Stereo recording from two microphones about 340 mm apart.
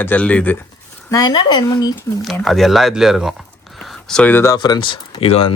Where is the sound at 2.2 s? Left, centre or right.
Centre.